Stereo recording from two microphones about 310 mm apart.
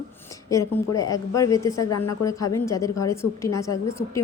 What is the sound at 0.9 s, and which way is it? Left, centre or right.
Speech, centre.